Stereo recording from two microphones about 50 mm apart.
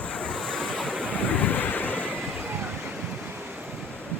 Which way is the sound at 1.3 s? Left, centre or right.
Left.